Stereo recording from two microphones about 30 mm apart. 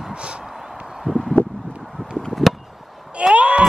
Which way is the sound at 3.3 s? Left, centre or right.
Right.